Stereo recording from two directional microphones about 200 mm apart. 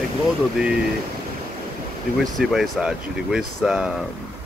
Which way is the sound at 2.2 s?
Centre (ahead or behind).